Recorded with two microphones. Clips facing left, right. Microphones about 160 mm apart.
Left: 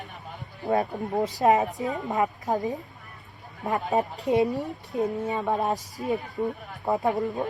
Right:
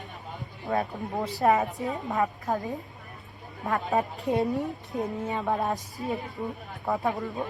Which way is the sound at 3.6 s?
20° left (ahead or behind).